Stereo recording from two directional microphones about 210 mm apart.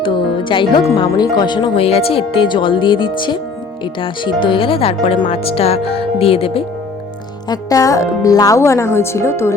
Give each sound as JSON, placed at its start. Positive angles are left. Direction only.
{"t": 0.0, "sound": "music", "side_deg": 25}
{"t": 0.9, "sound": "speech", "side_deg": 20}